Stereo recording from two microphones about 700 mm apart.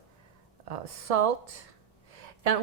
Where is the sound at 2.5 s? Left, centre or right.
Right.